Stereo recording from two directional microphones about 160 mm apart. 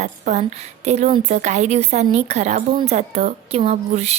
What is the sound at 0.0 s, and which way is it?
A woman's voice, 45° right (ahead or behind).